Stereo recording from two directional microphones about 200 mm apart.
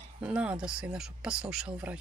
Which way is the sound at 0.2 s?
5° right (ahead or behind).